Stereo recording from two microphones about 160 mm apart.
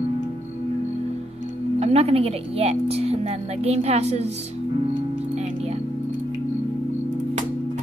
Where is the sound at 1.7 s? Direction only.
40° right (ahead or behind).